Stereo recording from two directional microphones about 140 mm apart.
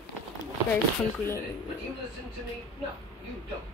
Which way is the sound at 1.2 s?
15° left (ahead or behind).